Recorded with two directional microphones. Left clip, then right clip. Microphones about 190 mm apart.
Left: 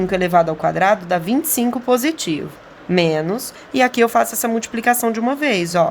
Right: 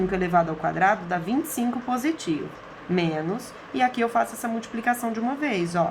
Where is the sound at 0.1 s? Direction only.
45° left (ahead or behind).